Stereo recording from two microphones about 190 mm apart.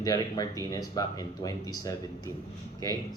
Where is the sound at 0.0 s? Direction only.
20° left (ahead or behind).